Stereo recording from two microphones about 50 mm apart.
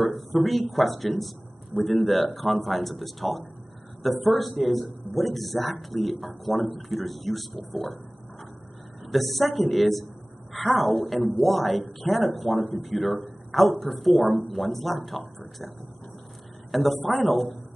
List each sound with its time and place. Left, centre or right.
0.0 s speech: centre
9.0 s speech: centre
16.7 s speech: centre